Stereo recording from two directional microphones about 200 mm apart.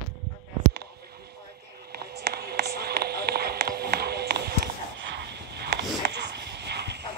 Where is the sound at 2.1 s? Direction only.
50° right (ahead or behind).